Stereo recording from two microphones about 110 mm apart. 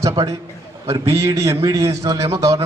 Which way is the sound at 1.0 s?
25° right (ahead or behind).